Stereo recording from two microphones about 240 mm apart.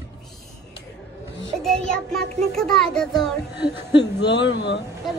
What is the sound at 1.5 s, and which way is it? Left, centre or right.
A child's voice, centre.